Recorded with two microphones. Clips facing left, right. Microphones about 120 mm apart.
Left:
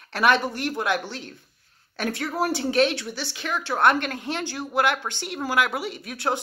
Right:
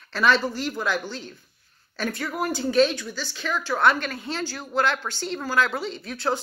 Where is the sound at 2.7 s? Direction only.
70° left (ahead or behind).